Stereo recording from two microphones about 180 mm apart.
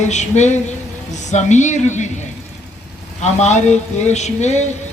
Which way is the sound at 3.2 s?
40° left (ahead or behind).